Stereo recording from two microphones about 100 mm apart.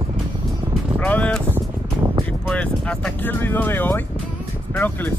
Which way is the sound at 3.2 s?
20° left (ahead or behind).